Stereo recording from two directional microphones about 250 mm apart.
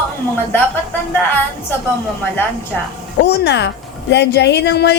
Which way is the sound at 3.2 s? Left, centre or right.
Left.